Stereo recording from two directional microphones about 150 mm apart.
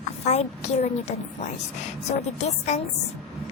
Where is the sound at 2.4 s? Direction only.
50° left (ahead or behind).